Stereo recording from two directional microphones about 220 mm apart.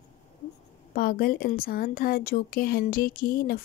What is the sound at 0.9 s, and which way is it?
Speech, 40° left (ahead or behind).